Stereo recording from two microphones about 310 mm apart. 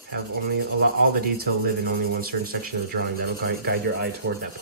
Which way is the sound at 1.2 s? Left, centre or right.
Right.